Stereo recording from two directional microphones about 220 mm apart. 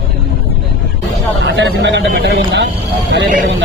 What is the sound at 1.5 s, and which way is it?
Speech, 55° right (ahead or behind).